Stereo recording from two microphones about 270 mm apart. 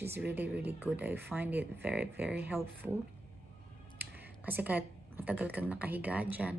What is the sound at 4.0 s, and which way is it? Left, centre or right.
Speech, centre.